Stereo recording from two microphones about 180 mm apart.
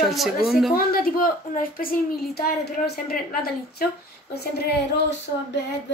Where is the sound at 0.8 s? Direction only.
55° left (ahead or behind).